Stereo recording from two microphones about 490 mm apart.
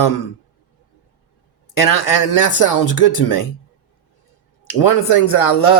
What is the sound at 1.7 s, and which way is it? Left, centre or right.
Speech, left.